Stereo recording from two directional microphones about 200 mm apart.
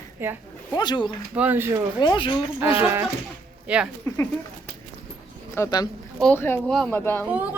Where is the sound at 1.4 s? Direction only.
10° right (ahead or behind).